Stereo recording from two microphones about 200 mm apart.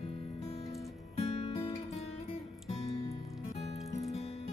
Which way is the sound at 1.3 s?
30° left (ahead or behind).